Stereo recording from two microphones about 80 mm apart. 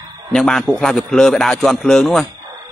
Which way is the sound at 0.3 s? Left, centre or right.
Centre.